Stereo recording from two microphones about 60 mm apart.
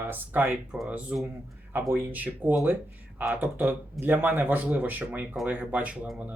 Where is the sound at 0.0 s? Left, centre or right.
Right.